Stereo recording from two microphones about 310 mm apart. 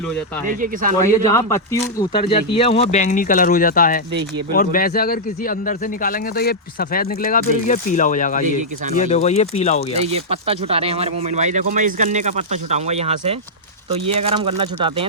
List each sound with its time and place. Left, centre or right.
0.4 s speech: right
1.3 s a man's voice: centre
10.1 s speech: centre